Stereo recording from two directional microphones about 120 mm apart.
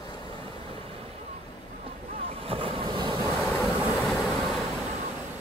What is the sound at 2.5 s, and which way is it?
Waves, 45° right (ahead or behind).